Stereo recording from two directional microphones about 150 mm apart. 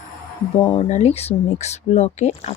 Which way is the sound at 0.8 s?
50° left (ahead or behind).